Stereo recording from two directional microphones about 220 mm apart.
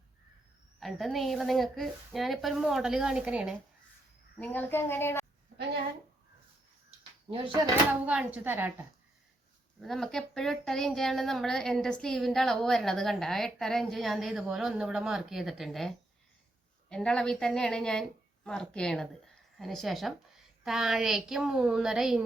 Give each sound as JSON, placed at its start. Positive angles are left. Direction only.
{"t": 0.8, "sound": "speech", "side_deg": 0}
{"t": 4.4, "sound": "speech", "side_deg": 10}
{"t": 7.3, "sound": "speech", "side_deg": -25}
{"t": 8.0, "sound": "speech", "side_deg": -5}
{"t": 9.8, "sound": "speech", "side_deg": 0}
{"t": 16.9, "sound": "speech", "side_deg": 5}